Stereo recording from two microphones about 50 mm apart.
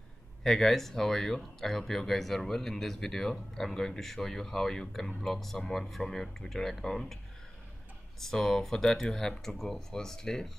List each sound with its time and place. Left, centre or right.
0.4 s speech: centre
8.2 s speech: centre